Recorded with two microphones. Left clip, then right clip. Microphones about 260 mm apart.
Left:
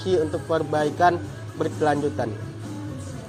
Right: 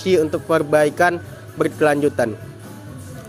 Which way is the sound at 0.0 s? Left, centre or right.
Right.